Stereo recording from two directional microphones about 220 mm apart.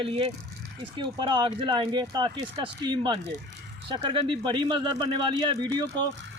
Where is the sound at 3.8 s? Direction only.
20° right (ahead or behind).